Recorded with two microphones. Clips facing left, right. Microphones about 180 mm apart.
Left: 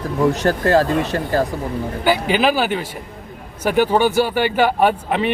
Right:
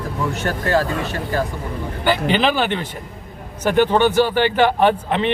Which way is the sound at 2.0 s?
5° left (ahead or behind).